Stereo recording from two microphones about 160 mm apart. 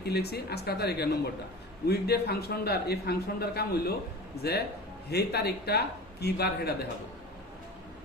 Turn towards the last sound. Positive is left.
turn(degrees=85)